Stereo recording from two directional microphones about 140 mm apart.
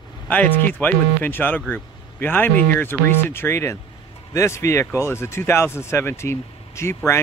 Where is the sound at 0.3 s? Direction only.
15° left (ahead or behind).